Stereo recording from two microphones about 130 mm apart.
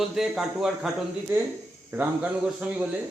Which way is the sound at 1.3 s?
15° right (ahead or behind).